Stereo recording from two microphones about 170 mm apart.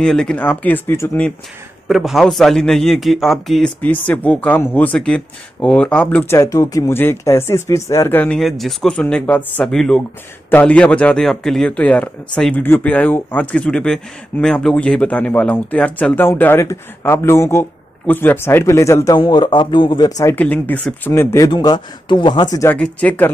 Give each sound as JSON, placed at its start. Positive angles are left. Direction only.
{"t": 0.0, "sound": "speech", "side_deg": 5}
{"t": 1.9, "sound": "a man's voice", "side_deg": 0}
{"t": 20.2, "sound": "speech", "side_deg": 10}
{"t": 21.5, "sound": "speech", "side_deg": 25}
{"t": 22.8, "sound": "speech", "side_deg": 5}